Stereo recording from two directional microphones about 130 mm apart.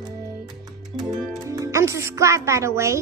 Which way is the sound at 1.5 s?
25° right (ahead or behind).